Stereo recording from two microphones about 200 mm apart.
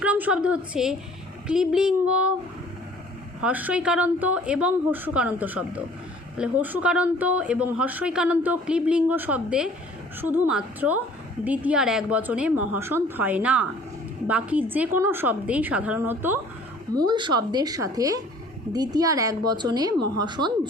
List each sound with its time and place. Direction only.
0.0 s a woman's voice: 5° right (ahead or behind)
3.4 s a woman's voice: 5° right (ahead or behind)